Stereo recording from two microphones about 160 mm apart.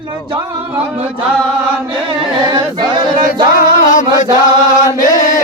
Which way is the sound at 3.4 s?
60° left (ahead or behind).